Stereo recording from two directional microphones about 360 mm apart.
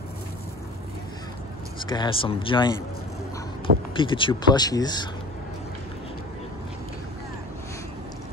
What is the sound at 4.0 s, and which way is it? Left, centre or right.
Speech, centre.